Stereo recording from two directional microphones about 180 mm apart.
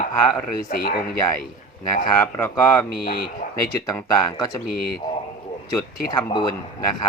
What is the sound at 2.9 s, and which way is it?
Speech, 60° left (ahead or behind).